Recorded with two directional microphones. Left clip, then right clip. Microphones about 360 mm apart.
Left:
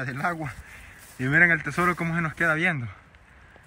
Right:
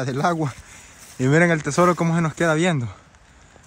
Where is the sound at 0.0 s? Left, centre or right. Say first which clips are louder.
Right 7 dB; centre.